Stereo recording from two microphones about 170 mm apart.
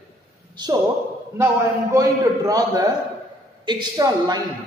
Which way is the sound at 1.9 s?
20° right (ahead or behind).